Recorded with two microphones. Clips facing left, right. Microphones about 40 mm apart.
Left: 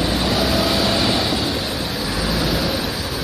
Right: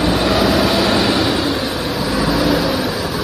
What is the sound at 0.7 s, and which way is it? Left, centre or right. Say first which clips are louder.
Train: right 4 dB; right.